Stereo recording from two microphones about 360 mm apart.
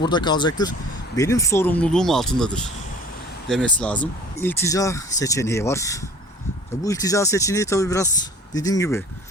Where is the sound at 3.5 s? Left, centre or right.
Centre.